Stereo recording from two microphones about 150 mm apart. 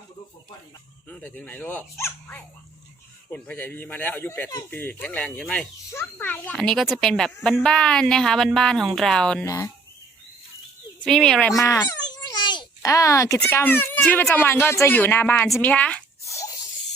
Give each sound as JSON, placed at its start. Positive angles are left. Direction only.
{"t": 1.0, "sound": "a child's voice", "side_deg": 10}
{"t": 9.4, "sound": "speech", "side_deg": 20}
{"t": 11.0, "sound": "a child's voice", "side_deg": 5}
{"t": 11.5, "sound": "a sound", "side_deg": 20}
{"t": 13.4, "sound": "speech", "side_deg": 15}
{"t": 16.2, "sound": "a sound", "side_deg": 20}